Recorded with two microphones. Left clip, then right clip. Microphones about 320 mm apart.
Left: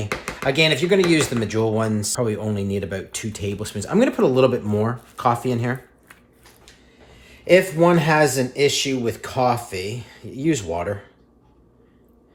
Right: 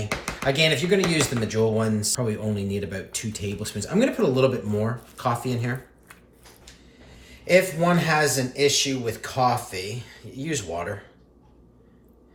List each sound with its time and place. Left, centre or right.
0.4 s speech: centre
7.4 s speech: left